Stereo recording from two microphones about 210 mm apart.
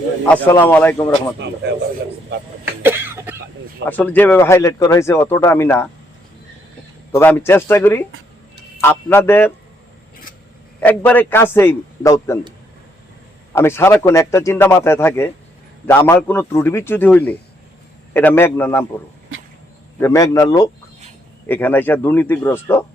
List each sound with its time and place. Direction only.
0.3 s speech: 10° left (ahead or behind)
2.8 s cough: 10° right (ahead or behind)
3.8 s speech: 10° left (ahead or behind)
7.1 s speech: 10° left (ahead or behind)
10.8 s speech: 10° left (ahead or behind)
13.5 s speech: 10° left (ahead or behind)
20.0 s speech: 15° left (ahead or behind)